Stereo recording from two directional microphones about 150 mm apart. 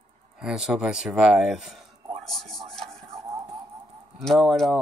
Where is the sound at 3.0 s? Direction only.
45° right (ahead or behind).